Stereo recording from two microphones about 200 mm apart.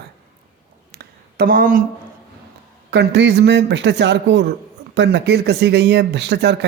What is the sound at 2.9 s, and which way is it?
Speech, 60° right (ahead or behind).